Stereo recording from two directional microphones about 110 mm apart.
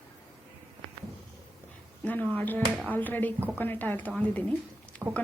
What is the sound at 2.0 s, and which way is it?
A woman's voice, 15° left (ahead or behind).